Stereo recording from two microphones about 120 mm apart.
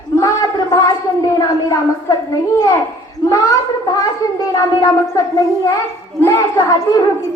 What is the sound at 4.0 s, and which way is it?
A child's voice, 30° left (ahead or behind).